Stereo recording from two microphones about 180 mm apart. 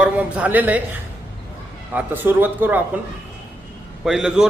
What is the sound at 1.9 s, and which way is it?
Speech, 10° right (ahead or behind).